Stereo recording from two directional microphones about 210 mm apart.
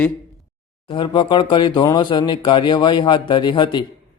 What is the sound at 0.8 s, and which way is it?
Speech, 25° left (ahead or behind).